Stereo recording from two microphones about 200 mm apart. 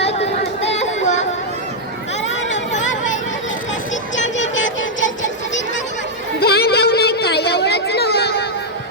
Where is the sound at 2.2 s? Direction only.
65° left (ahead or behind).